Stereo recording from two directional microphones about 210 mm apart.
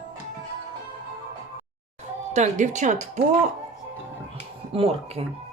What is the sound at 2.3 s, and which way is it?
Speech, 35° right (ahead or behind).